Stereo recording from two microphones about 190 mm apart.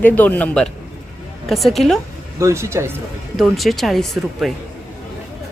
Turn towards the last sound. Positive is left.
turn(degrees=0)  # may be behind; listen again after turning